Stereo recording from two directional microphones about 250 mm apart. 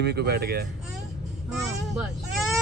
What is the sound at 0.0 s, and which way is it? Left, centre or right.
Speech, right.